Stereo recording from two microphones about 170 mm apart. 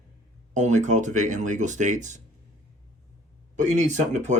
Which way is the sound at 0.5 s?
45° right (ahead or behind).